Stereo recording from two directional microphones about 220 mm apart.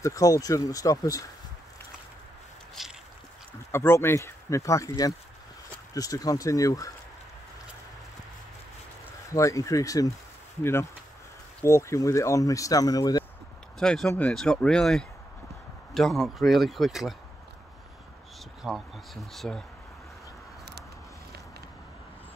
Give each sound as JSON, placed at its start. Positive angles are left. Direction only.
{"t": 0.0, "sound": "speech", "side_deg": 15}
{"t": 2.8, "sound": "boat", "side_deg": 0}
{"t": 3.7, "sound": "speech", "side_deg": 10}
{"t": 9.3, "sound": "speech", "side_deg": 15}
{"t": 13.7, "sound": "speech", "side_deg": 0}
{"t": 18.6, "sound": "speech", "side_deg": 0}